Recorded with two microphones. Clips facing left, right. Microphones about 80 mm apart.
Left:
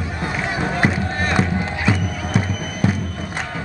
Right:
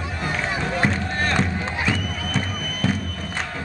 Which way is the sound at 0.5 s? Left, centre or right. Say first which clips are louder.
Left 4 dB; centre.